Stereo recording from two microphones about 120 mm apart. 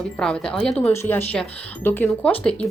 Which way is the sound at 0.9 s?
20° left (ahead or behind).